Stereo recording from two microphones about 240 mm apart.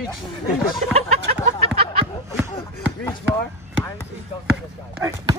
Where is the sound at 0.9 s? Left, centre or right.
Right.